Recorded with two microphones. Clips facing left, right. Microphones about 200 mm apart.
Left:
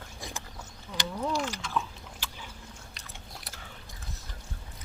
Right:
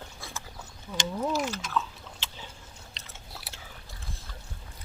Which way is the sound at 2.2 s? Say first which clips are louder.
Left 2 dB; 25° right (ahead or behind).